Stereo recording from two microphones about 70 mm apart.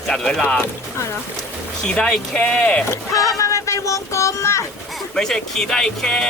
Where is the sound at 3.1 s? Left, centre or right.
Left.